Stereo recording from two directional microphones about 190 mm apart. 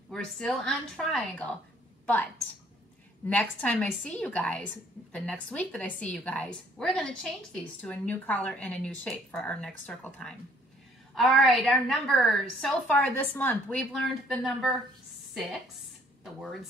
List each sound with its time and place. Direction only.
0.1 s a woman's voice: 5° left (ahead or behind)
3.3 s a woman's voice: 5° left (ahead or behind)